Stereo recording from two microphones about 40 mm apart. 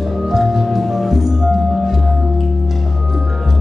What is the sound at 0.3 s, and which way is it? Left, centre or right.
Music, centre.